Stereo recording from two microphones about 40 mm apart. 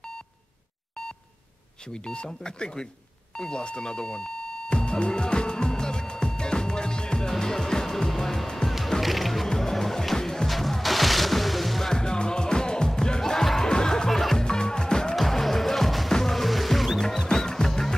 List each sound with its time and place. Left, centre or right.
1.9 s speech: left
3.3 s music: left
8.6 s music: centre
11.9 s music: centre
15.1 s music: centre
17.0 s music: centre